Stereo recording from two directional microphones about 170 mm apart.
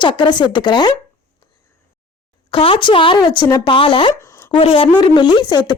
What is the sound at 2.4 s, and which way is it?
Speech, 30° left (ahead or behind).